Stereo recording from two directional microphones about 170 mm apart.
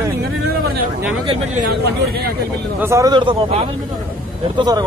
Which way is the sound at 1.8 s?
65° right (ahead or behind).